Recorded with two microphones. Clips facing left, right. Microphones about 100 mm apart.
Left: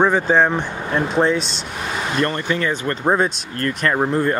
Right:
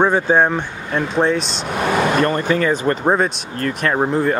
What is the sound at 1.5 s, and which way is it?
Speech, 50° right (ahead or behind).